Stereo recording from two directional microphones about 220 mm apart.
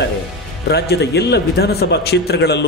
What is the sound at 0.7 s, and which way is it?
A man's voice, 50° left (ahead or behind).